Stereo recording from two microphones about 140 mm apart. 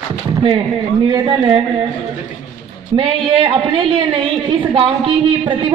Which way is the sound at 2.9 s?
40° right (ahead or behind).